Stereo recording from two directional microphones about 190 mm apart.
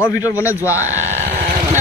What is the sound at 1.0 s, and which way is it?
Speech, 35° right (ahead or behind).